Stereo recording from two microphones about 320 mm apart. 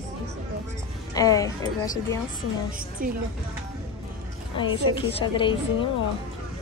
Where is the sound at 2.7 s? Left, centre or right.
Right.